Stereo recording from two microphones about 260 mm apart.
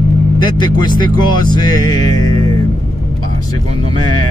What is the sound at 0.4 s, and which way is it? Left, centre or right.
Speech, centre.